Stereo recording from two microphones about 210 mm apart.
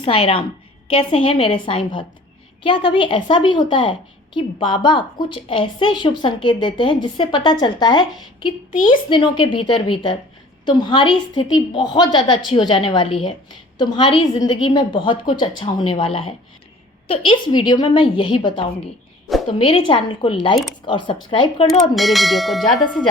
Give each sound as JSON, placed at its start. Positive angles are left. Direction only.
{"t": 0.9, "sound": "a woman's voice", "side_deg": 25}
{"t": 21.7, "sound": "bell", "side_deg": 0}